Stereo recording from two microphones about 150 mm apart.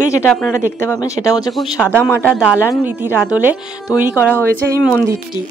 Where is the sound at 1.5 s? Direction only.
Centre (ahead or behind).